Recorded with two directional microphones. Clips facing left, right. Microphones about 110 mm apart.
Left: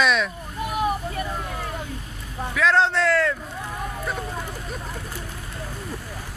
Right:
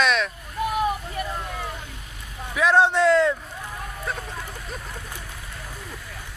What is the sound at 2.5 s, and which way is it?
Speech, 15° right (ahead or behind).